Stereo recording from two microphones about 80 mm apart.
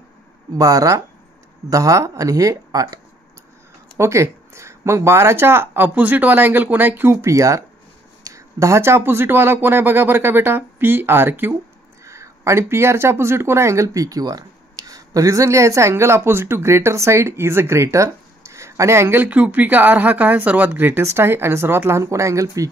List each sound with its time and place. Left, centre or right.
0.6 s speech: right
4.0 s speech: right
12.0 s speech: right